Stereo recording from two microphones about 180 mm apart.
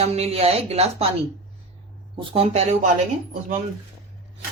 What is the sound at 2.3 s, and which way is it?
Speech, 35° right (ahead or behind).